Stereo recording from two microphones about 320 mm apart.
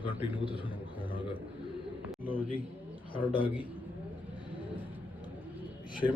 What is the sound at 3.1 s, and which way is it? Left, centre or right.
Speech, centre.